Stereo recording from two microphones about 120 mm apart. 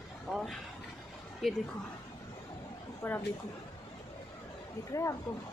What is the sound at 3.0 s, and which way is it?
Speech, 20° left (ahead or behind).